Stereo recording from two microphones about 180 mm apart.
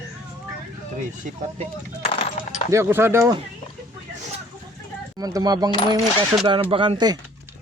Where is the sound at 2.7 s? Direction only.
15° right (ahead or behind).